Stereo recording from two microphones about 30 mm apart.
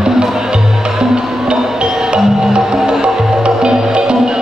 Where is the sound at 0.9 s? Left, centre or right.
Right.